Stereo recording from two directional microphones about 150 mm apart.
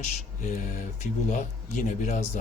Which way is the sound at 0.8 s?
55° left (ahead or behind).